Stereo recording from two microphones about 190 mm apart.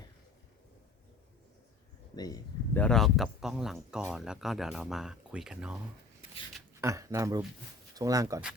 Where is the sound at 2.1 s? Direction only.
20° left (ahead or behind).